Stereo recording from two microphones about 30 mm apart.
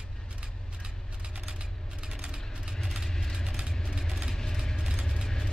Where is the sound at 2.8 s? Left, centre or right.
Centre.